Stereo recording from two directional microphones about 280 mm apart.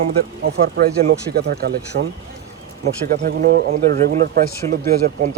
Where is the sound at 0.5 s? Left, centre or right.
Right.